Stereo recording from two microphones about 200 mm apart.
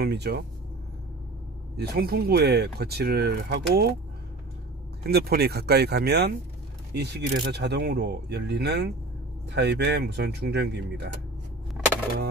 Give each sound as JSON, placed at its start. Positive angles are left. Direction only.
{"t": 0.0, "sound": "speech", "side_deg": -55}
{"t": 1.8, "sound": "speech", "side_deg": -50}
{"t": 5.0, "sound": "speech", "side_deg": -50}